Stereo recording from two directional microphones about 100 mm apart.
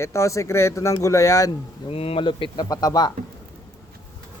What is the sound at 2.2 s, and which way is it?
Speech, 55° left (ahead or behind).